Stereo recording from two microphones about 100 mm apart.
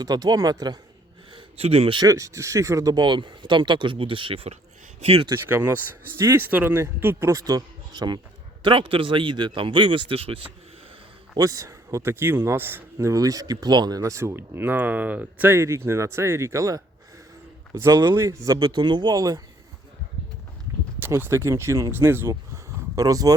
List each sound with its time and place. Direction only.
0.0 s speech: 40° right (ahead or behind)
1.3 s a sound: 75° right (ahead or behind)
2.0 s speech: 35° right (ahead or behind); by 4.5 s 70° right (ahead or behind)
4.9 s speech: 90° right
5.5 s speech: 25° right (ahead or behind); by 8.2 s 45° right (ahead or behind)
8.6 s speech: 60° right (ahead or behind)
11.3 s speech: 35° right (ahead or behind)
18.6 s speech: 50° right (ahead or behind)
21.0 s speech: 25° right (ahead or behind)
22.3 s a sound: 35° right (ahead or behind)